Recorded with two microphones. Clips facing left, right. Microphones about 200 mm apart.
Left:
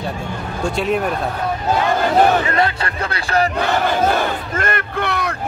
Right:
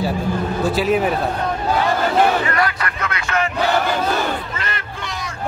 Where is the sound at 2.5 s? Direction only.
25° left (ahead or behind).